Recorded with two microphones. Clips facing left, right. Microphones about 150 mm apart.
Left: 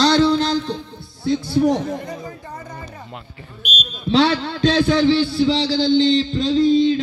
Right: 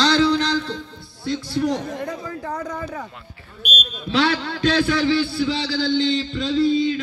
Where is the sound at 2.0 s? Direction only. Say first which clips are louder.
Right 3 dB; 80° right.